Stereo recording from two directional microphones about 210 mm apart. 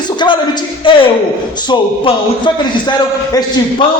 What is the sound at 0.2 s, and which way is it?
A man's voice, 20° left (ahead or behind).